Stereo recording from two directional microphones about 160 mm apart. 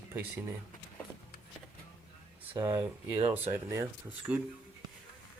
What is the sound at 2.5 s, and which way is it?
Speech, 20° right (ahead or behind).